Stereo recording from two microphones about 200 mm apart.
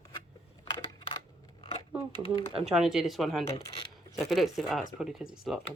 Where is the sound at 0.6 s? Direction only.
25° left (ahead or behind).